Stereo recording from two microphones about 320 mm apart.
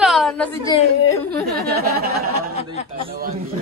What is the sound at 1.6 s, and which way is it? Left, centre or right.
Speech, right.